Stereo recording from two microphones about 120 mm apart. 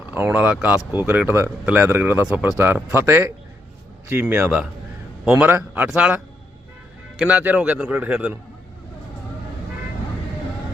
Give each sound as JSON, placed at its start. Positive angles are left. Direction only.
{"t": 0.1, "sound": "speech", "side_deg": -15}